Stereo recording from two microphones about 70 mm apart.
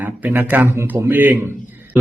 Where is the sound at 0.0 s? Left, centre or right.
Right.